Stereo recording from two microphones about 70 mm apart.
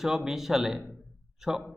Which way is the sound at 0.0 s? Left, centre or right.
Centre.